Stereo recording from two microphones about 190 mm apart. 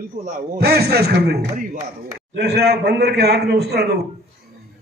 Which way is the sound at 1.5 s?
40° right (ahead or behind).